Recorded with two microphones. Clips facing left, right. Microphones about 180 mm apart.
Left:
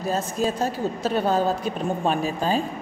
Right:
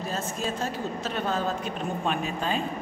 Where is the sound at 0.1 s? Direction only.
40° left (ahead or behind).